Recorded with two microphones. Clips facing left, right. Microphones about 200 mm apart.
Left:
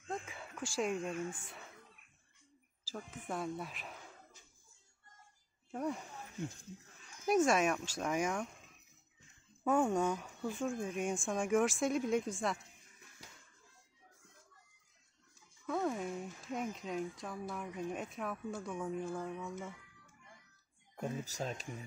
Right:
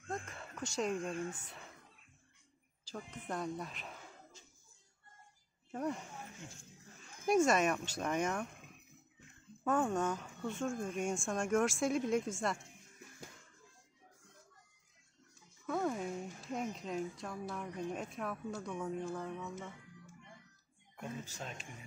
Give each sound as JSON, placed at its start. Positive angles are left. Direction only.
{"t": 0.1, "sound": "a sound", "side_deg": 0}
{"t": 0.7, "sound": "speech", "side_deg": 5}
{"t": 1.1, "sound": "speech", "side_deg": -25}
{"t": 2.9, "sound": "speech", "side_deg": 5}
{"t": 5.7, "sound": "speech", "side_deg": 5}
{"t": 8.5, "sound": "a sound", "side_deg": -55}
{"t": 9.7, "sound": "speech", "side_deg": 10}
{"t": 15.6, "sound": "speech", "side_deg": 0}
{"t": 21.2, "sound": "speech", "side_deg": 40}